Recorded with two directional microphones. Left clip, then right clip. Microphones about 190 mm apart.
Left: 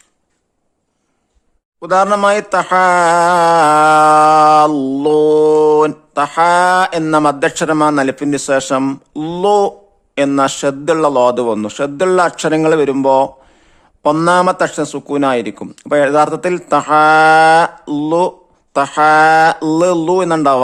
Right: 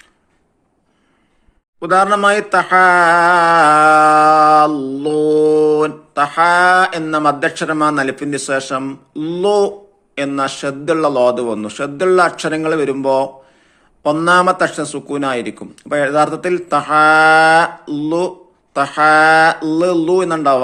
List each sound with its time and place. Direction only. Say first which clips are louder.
1.9 s a man's voice: left 1 dB; 40° left (ahead or behind)